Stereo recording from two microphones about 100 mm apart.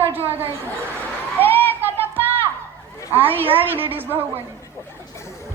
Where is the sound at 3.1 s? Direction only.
20° right (ahead or behind).